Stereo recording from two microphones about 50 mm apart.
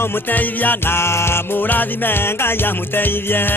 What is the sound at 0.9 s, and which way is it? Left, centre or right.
Music, left.